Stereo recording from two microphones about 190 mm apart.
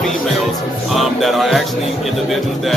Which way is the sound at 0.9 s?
Centre (ahead or behind).